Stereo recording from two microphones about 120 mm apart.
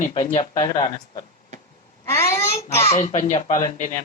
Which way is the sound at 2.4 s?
60° left (ahead or behind).